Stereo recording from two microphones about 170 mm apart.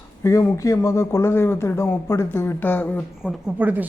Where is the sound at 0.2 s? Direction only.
15° left (ahead or behind).